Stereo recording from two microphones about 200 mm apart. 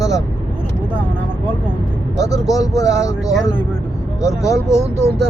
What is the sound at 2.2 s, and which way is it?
Speech, 15° left (ahead or behind).